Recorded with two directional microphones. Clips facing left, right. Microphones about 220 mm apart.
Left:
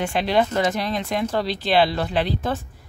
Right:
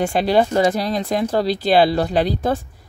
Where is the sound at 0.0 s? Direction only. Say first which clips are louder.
Right 4 dB; 40° right (ahead or behind).